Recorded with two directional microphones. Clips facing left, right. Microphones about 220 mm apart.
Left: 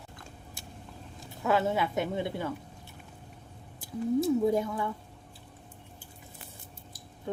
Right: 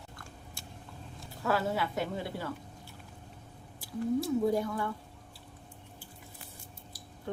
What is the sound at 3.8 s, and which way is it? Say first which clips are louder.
Speech: left 3 dB; 20° left (ahead or behind).